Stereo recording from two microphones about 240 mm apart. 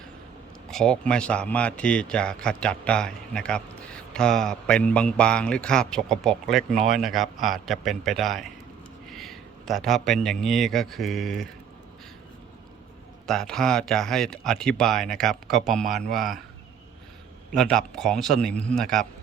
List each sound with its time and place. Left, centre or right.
0.7 s a man's voice: centre
13.2 s speech: centre
17.5 s speech: centre